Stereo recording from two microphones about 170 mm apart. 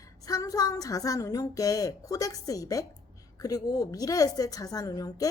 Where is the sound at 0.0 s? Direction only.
20° left (ahead or behind).